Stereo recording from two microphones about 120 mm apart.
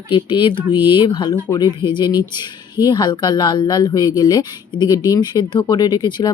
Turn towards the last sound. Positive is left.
turn(degrees=35)  # may be behind; listen again after turning